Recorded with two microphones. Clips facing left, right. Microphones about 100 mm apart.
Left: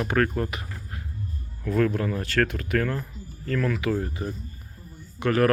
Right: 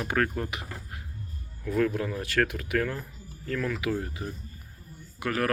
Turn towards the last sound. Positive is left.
turn(degrees=-5)  # may be behind; listen again after turning